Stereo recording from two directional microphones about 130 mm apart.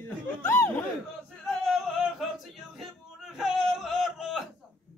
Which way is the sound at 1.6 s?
Centre (ahead or behind).